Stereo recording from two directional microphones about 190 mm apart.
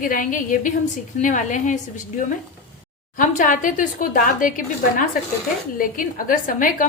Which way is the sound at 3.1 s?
45° left (ahead or behind).